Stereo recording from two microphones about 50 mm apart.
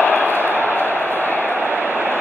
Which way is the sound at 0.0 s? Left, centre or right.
Left.